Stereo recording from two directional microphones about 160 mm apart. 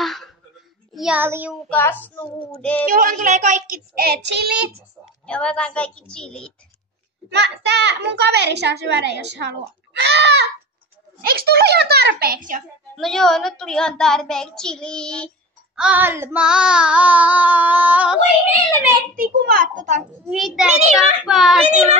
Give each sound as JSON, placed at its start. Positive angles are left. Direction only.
{"t": 0.0, "sound": "a sound", "side_deg": 0}
{"t": 0.9, "sound": "a child's voice", "side_deg": -5}
{"t": 1.2, "sound": "child singing", "side_deg": -15}
{"t": 1.7, "sound": "a woman's voice", "side_deg": 10}
{"t": 2.9, "sound": "a child's voice", "side_deg": -60}
{"t": 5.2, "sound": "a woman's voice", "side_deg": 5}
{"t": 7.2, "sound": "a child's voice", "side_deg": -90}
{"t": 11.2, "sound": "speech", "side_deg": -75}
{"t": 12.9, "sound": "a child's voice", "side_deg": 0}
{"t": 15.8, "sound": "child singing", "side_deg": -10}
{"t": 19.1, "sound": "a child's voice", "side_deg": -60}
{"t": 20.2, "sound": "a child's voice", "side_deg": 0}